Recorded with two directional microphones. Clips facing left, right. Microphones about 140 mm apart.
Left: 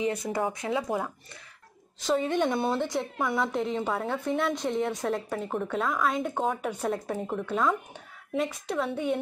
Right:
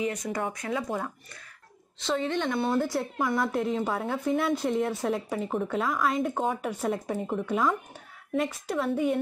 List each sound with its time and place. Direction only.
0.0 s speech: 30° left (ahead or behind)
0.8 s a woman's voice: 10° left (ahead or behind)
2.7 s a woman's voice: 5° right (ahead or behind)